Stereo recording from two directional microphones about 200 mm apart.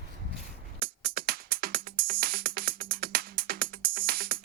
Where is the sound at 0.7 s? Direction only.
50° right (ahead or behind).